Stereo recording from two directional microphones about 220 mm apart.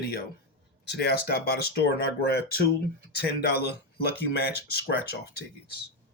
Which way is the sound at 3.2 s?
45° left (ahead or behind).